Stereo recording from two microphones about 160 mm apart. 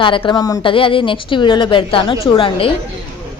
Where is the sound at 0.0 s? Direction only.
30° left (ahead or behind).